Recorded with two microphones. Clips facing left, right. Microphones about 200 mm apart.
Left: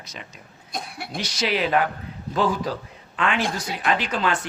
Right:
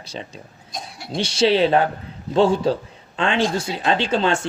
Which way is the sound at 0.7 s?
60° left (ahead or behind).